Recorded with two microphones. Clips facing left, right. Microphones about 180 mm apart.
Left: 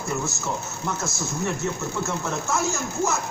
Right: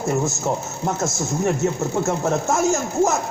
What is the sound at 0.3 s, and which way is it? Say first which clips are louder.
A man's voice: right 6 dB; 40° right (ahead or behind).